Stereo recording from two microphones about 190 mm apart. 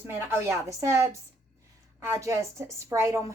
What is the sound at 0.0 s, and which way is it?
Speech, 10° right (ahead or behind).